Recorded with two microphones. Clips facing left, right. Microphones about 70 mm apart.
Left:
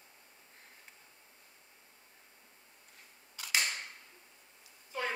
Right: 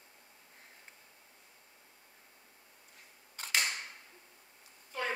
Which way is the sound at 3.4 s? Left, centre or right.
Right.